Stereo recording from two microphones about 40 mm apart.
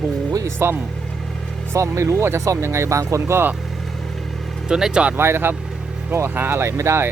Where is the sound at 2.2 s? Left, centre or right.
Right.